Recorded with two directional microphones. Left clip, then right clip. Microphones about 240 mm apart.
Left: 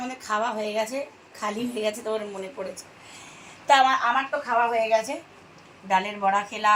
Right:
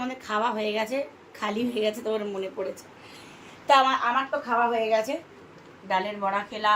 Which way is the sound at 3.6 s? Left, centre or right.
Centre.